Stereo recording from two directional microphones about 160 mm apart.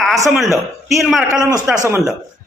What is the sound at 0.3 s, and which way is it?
Speech, centre (ahead or behind).